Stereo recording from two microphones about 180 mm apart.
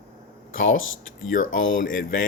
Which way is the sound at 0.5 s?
90° left.